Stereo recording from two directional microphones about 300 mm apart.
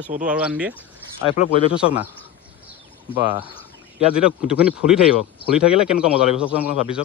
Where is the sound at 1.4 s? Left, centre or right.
Left.